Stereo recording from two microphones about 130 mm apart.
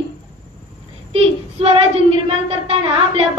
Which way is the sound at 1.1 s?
45° right (ahead or behind).